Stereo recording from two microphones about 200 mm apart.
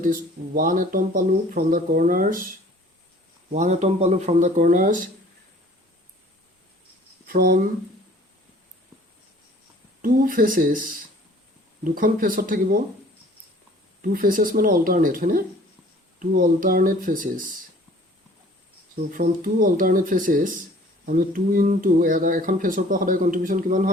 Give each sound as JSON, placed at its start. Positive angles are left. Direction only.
{"t": 0.0, "sound": "speech", "side_deg": -40}
{"t": 3.5, "sound": "speech", "side_deg": -35}
{"t": 7.3, "sound": "speech", "side_deg": -45}
{"t": 10.0, "sound": "speech", "side_deg": -45}
{"t": 14.0, "sound": "speech", "side_deg": -45}
{"t": 19.1, "sound": "speech", "side_deg": -45}